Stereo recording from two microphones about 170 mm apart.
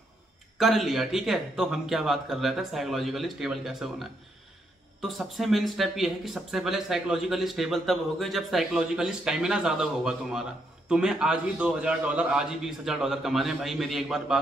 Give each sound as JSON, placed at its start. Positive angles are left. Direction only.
{"t": 0.6, "sound": "speech", "side_deg": 0}